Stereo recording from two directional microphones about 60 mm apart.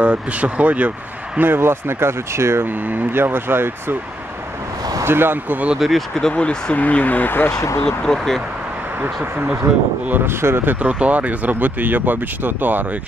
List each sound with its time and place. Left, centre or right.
0.0 s speech: right
1.5 s speech: right
2.9 s speech: right
5.0 s speech: right
5.8 s speech: centre
6.7 s speech: left
7.5 s speech: left
7.8 s speech: centre
10.2 s speech: right